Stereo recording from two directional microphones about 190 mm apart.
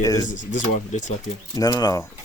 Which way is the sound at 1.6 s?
20° left (ahead or behind).